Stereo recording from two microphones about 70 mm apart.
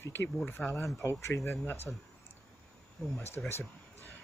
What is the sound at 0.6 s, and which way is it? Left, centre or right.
Speech, left.